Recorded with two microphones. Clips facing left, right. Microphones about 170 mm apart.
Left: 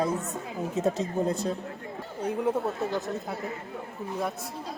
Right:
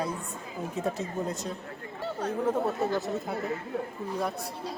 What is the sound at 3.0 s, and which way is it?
Speech, centre (ahead or behind).